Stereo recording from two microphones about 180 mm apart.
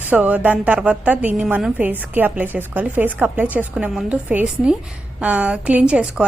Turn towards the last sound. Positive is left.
turn(degrees=-5)  # may be behind; listen again after turning